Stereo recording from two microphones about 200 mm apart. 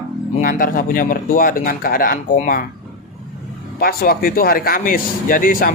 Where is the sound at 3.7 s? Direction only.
50° left (ahead or behind).